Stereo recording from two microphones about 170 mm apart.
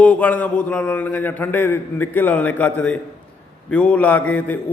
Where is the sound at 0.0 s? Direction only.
10° left (ahead or behind).